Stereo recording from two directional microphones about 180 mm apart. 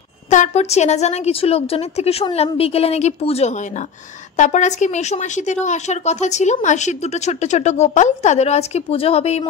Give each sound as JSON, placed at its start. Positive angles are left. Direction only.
{"t": 0.3, "sound": "a woman's voice", "side_deg": 40}